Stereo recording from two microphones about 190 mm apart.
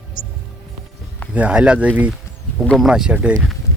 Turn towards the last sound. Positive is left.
turn(degrees=-5)  # may be behind; listen again after turning